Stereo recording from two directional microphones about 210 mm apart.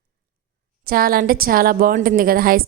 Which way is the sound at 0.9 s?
45° right (ahead or behind).